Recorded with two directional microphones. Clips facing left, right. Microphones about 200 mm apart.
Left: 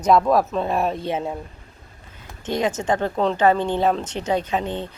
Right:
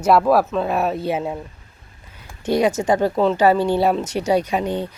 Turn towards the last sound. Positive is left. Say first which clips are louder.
# right 3 dB
turn(degrees=-10)  # may be behind; listen again after turning